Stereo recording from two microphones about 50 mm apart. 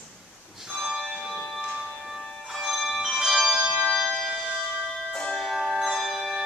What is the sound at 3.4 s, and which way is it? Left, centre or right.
Music, right.